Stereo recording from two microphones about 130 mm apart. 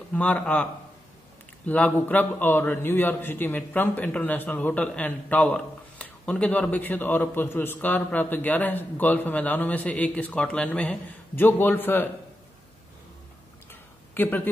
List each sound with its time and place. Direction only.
0.1 s a man's voice: 10° left (ahead or behind)
1.7 s a man's voice: 15° left (ahead or behind)
13.7 s a sound: 15° left (ahead or behind)